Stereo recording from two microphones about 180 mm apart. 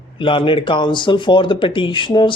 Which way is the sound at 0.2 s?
30° left (ahead or behind).